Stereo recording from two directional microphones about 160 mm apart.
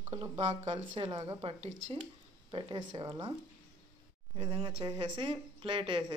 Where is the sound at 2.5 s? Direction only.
30° right (ahead or behind).